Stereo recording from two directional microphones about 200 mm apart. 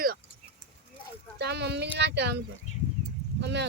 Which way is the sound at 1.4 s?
55° right (ahead or behind).